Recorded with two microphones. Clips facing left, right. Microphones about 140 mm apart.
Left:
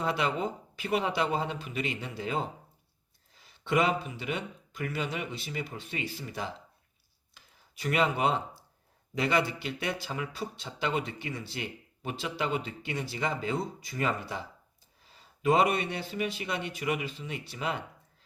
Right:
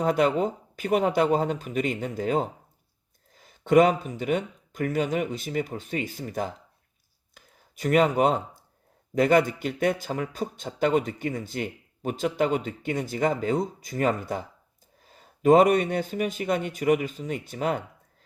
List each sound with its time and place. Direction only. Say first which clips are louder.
0.0 s a man's voice: right 7 dB; 45° right (ahead or behind)